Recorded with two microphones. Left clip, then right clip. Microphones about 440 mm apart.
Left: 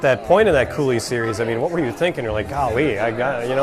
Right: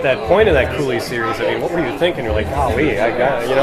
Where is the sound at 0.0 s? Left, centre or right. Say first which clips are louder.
Right 2 dB; left.